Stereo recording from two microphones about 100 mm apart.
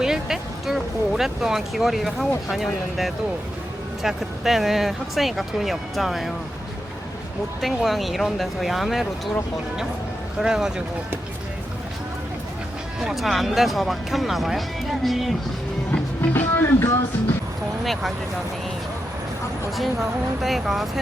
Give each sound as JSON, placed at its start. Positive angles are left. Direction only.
{"t": 0.0, "sound": "speech", "side_deg": -5}
{"t": 7.6, "sound": "speech", "side_deg": 0}
{"t": 10.4, "sound": "speech", "side_deg": -5}
{"t": 13.0, "sound": "speech", "side_deg": 0}
{"t": 15.9, "sound": "music", "side_deg": 20}
{"t": 19.7, "sound": "speech", "side_deg": 0}